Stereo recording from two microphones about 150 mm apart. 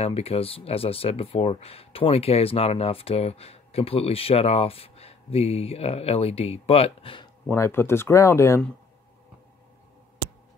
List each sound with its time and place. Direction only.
0.0 s speech: 40° left (ahead or behind)
7.4 s speech: 15° left (ahead or behind)